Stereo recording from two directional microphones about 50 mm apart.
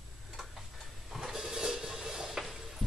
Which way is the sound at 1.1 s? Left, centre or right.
Centre.